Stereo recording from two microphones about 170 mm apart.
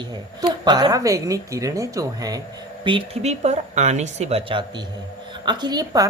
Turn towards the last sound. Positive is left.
turn(degrees=-25)  # may be behind; listen again after turning